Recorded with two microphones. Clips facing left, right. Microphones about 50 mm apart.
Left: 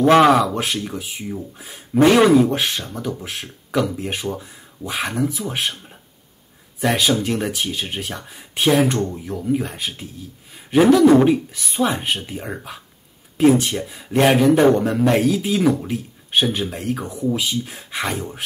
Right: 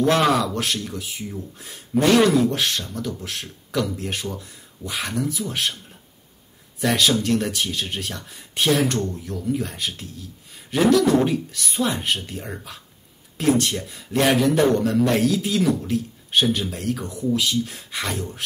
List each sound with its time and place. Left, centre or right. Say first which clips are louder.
0.0 s speech: left 6 dB; left
11.6 s speech: left 2 dB; centre